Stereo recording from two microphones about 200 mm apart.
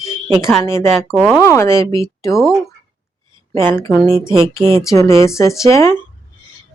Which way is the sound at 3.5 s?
10° left (ahead or behind).